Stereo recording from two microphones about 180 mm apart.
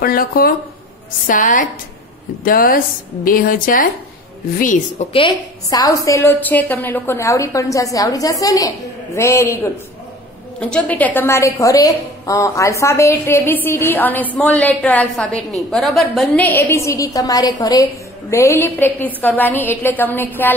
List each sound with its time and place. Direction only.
0.0 s a woman's voice: 55° left (ahead or behind)
5.1 s a woman's voice: 25° left (ahead or behind)